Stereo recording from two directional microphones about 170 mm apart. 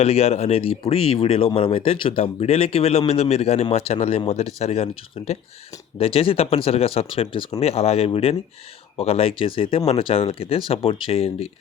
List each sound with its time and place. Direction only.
0.0 s speech: 35° left (ahead or behind)